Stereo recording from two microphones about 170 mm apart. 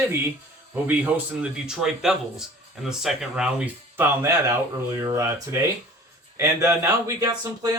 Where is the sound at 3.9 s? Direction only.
15° right (ahead or behind).